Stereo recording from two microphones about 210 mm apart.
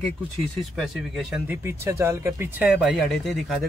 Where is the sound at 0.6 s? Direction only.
Centre (ahead or behind).